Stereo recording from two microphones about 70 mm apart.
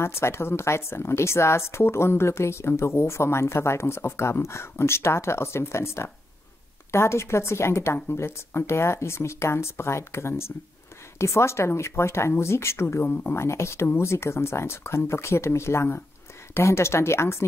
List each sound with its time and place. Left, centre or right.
0.0 s a woman's voice: left